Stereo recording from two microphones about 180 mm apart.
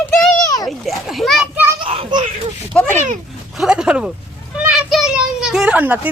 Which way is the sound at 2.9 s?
45° right (ahead or behind).